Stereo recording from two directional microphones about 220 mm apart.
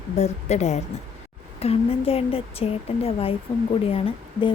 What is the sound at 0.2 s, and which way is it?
A woman's voice, 30° left (ahead or behind).